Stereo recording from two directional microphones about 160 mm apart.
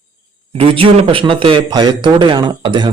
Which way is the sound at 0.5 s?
35° right (ahead or behind).